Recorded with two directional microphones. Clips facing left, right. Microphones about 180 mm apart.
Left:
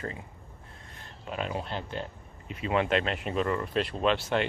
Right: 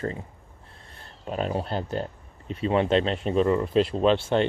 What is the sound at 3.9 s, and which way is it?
Speech, 30° right (ahead or behind).